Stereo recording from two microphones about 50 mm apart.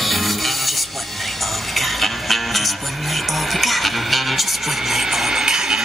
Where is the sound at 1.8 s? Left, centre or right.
Centre.